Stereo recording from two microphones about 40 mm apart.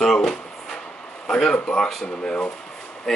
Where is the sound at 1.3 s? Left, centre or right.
Left.